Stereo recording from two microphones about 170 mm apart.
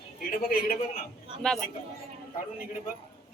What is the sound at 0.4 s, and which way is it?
Speech, 60° left (ahead or behind).